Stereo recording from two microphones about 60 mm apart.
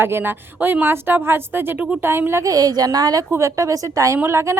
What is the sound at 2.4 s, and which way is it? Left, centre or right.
Speech, right.